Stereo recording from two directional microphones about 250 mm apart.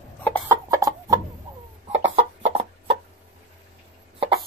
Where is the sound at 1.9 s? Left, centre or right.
Right.